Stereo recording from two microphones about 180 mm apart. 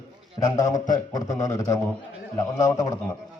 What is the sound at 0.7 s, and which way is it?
Speech, 45° left (ahead or behind).